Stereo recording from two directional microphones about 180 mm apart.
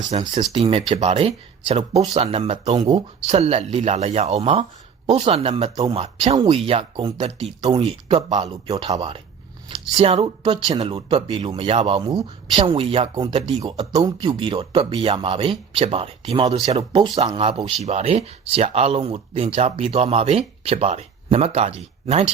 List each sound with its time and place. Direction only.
0.3 s speech: 30° right (ahead or behind)